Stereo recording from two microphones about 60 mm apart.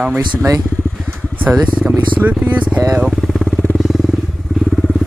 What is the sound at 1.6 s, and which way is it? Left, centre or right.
Speech, right.